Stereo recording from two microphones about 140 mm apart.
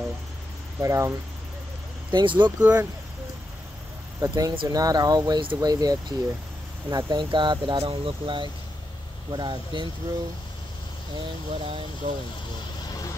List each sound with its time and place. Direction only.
0.7 s speech: 20° right (ahead or behind)
2.0 s speech: 35° right (ahead or behind)
2.6 s speech: 10° right (ahead or behind)
4.2 s speech: 25° right (ahead or behind)
11.1 s speech: 40° right (ahead or behind)
12.0 s speech: 55° right (ahead or behind)